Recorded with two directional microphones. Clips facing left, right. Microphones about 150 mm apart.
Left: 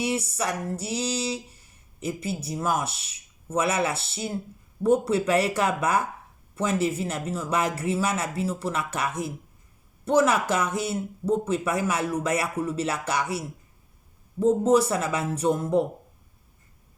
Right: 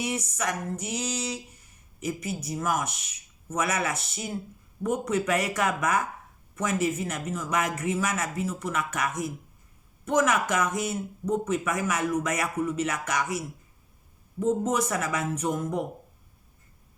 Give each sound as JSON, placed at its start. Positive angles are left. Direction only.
{"t": 0.0, "sound": "speech", "side_deg": 30}